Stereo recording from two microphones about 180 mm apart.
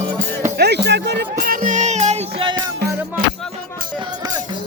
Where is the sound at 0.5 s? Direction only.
65° right (ahead or behind); by 2.6 s 30° right (ahead or behind).